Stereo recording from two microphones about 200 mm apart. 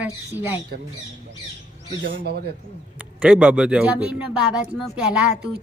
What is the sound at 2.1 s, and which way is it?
Speech, 55° right (ahead or behind).